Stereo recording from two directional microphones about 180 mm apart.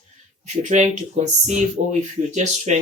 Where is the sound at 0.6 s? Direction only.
40° right (ahead or behind).